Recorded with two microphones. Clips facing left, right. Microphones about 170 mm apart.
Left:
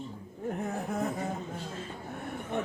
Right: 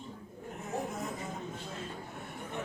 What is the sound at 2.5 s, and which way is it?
Chatter, 60° left (ahead or behind).